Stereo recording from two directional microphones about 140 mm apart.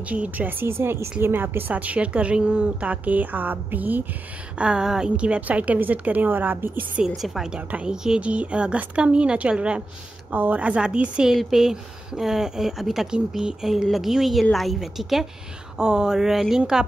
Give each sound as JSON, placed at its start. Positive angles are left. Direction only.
{"t": 0.1, "sound": "a woman's voice", "side_deg": -10}
{"t": 7.2, "sound": "a woman's voice", "side_deg": 0}